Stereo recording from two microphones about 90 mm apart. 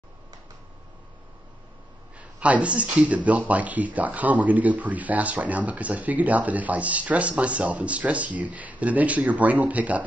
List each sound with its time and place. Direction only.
2.1 s a man's voice: 15° right (ahead or behind)